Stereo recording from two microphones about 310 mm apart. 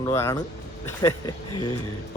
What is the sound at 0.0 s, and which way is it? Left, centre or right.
Speech, centre.